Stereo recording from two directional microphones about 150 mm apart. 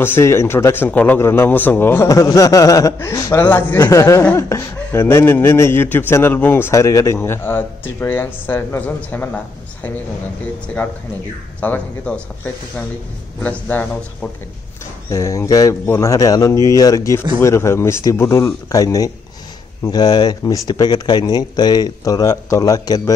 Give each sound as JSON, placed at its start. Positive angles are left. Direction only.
{"t": 0.0, "sound": "speech", "side_deg": 15}
{"t": 11.6, "sound": "speech", "side_deg": 10}
{"t": 13.4, "sound": "speech", "side_deg": 10}
{"t": 15.0, "sound": "speech", "side_deg": 20}